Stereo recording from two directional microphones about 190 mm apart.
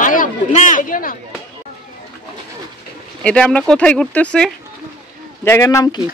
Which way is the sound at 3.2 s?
5° left (ahead or behind).